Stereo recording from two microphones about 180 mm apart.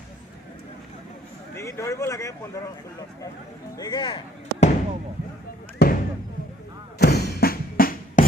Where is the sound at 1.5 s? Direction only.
15° left (ahead or behind).